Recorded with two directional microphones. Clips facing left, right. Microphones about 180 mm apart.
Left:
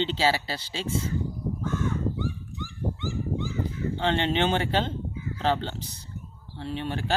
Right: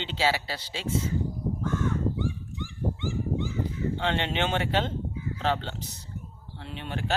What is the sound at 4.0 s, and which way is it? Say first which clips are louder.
Speech: left 5 dB; 35° left (ahead or behind).